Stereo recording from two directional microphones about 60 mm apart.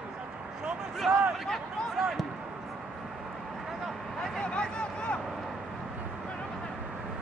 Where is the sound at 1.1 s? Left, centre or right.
Centre.